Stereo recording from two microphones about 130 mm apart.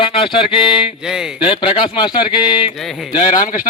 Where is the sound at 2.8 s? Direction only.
Centre (ahead or behind).